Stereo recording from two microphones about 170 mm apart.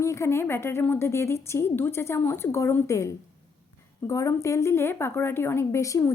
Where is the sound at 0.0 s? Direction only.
15° left (ahead or behind).